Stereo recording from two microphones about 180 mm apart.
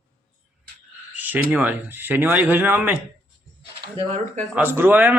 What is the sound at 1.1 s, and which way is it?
Speech, 10° right (ahead or behind).